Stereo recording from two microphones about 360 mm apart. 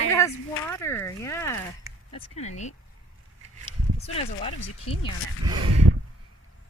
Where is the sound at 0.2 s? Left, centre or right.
Centre.